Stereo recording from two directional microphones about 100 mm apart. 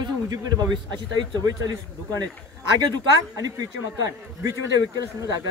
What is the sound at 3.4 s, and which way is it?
A man's voice, 35° right (ahead or behind).